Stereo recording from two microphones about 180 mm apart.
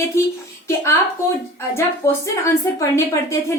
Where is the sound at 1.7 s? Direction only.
15° left (ahead or behind).